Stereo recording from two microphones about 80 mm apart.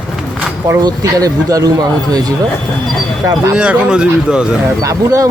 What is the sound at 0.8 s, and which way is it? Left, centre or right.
Speech, right.